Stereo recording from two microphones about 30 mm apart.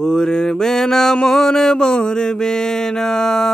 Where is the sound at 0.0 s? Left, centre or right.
Left.